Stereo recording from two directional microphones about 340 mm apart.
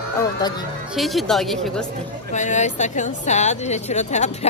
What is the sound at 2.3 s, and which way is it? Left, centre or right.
Speech, left.